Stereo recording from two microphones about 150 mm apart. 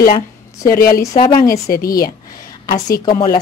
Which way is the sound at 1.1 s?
35° left (ahead or behind).